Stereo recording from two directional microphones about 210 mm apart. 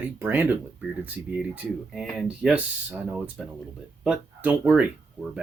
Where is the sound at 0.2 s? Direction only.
10° right (ahead or behind).